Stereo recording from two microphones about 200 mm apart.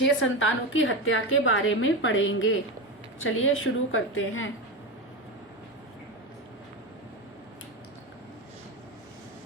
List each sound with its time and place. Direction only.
0.0 s a woman's voice: 75° left (ahead or behind)
3.2 s a woman's voice: 90° left